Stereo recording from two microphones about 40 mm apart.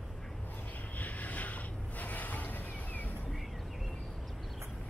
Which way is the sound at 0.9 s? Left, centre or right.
Left.